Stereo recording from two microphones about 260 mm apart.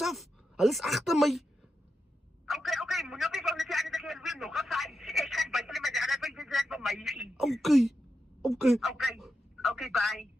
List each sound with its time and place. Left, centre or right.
0.0 s speech: centre
2.5 s a sound: centre
8.4 s speech: centre